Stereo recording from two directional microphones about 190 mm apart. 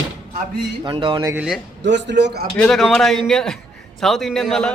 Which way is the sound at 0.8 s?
25° right (ahead or behind).